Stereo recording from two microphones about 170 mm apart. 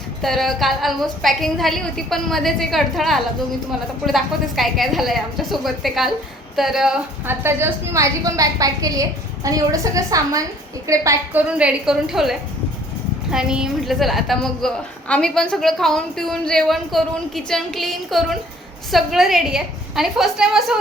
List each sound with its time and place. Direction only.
0.2 s a woman's voice: centre (ahead or behind); by 11.4 s 20° right (ahead or behind)
11.5 s a woman's voice: 5° right (ahead or behind)